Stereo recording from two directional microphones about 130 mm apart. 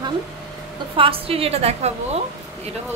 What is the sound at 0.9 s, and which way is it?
A woman's voice, 45° right (ahead or behind).